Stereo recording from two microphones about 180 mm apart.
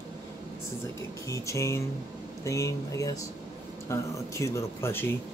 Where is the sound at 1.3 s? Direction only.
15° left (ahead or behind).